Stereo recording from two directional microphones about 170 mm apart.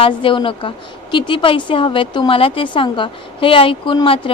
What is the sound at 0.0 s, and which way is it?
A woman's voice, 30° left (ahead or behind).